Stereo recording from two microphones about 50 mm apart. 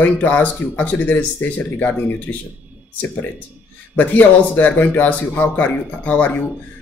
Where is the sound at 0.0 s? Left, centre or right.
Left.